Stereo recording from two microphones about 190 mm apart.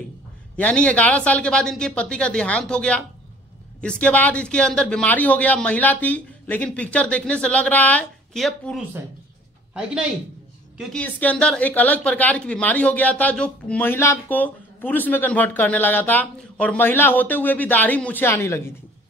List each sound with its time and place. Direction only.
0.6 s speech: 5° left (ahead or behind)
10.8 s speech: 5° left (ahead or behind)